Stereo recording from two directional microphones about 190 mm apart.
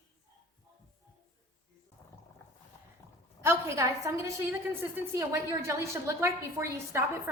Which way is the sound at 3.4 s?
15° right (ahead or behind).